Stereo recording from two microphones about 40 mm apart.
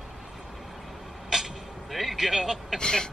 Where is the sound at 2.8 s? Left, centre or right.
Centre.